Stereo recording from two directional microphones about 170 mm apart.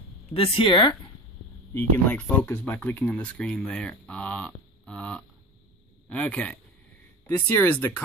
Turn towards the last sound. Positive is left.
turn(degrees=10)  # may be behind; listen again after turning